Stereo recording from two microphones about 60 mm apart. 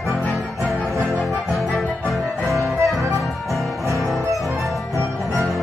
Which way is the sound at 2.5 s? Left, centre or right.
Right.